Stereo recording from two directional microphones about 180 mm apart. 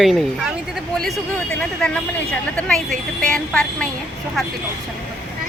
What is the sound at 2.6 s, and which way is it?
Speech, 5° left (ahead or behind).